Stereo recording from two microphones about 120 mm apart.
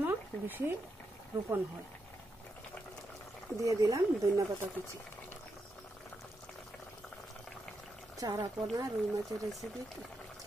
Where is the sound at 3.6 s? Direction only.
25° right (ahead or behind).